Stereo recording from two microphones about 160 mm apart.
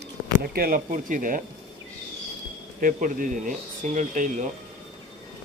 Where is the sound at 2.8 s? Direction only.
55° right (ahead or behind).